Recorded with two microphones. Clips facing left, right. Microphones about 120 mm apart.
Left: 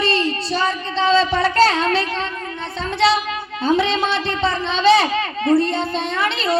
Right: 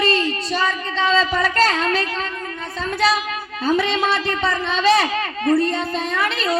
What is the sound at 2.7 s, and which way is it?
Child singing, 25° left (ahead or behind).